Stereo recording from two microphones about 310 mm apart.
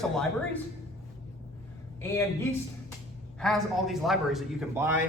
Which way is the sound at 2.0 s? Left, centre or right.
Centre.